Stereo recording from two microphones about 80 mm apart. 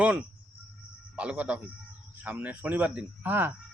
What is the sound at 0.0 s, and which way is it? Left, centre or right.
Speech, centre.